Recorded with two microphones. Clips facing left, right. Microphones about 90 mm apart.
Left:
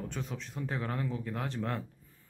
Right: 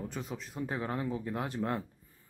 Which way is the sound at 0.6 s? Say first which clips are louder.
Right 1 dB; 15° right (ahead or behind).